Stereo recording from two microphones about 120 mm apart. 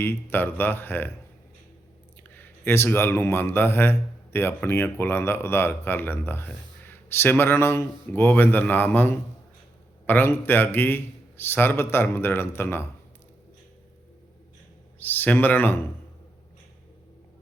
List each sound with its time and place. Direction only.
0.0 s a man's voice: 15° left (ahead or behind)
2.3 s a man's voice: 15° left (ahead or behind)
14.9 s a man's voice: 15° left (ahead or behind)